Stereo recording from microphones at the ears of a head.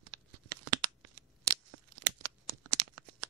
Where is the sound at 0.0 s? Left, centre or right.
Right.